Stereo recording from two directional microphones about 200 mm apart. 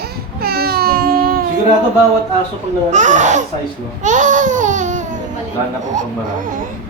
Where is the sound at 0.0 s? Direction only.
50° right (ahead or behind).